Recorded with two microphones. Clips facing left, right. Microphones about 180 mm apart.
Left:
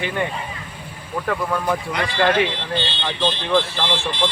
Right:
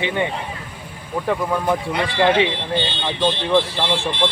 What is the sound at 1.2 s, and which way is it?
Speech, 15° right (ahead or behind).